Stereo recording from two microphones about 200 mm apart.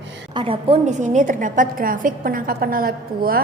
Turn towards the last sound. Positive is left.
turn(degrees=-45)  # may be behind; listen again after turning